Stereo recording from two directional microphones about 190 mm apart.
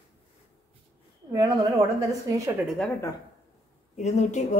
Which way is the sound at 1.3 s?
20° right (ahead or behind).